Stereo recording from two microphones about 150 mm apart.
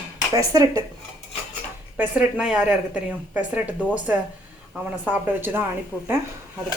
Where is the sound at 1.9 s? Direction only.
5° right (ahead or behind).